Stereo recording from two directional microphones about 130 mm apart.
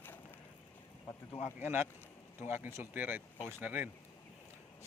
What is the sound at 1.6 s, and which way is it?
Speech, 15° right (ahead or behind).